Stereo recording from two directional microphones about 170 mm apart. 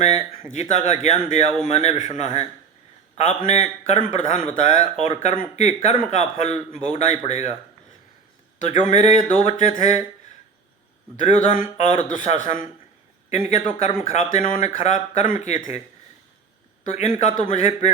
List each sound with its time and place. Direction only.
0.5 s a man's voice: 45° left (ahead or behind)
8.6 s speech: 40° left (ahead or behind)
11.2 s speech: 45° left (ahead or behind)
16.9 s a man's voice: 40° left (ahead or behind)